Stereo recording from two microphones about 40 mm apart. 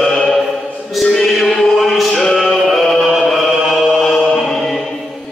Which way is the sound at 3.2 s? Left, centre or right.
Centre.